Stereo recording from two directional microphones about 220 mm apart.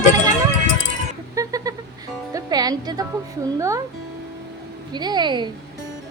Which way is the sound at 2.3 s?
15° right (ahead or behind).